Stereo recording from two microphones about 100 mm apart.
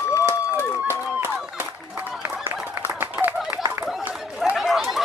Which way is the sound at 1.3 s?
10° right (ahead or behind).